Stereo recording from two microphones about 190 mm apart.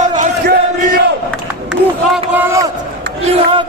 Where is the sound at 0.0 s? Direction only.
40° right (ahead or behind).